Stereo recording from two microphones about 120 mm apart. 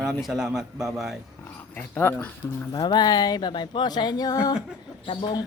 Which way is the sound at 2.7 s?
40° left (ahead or behind).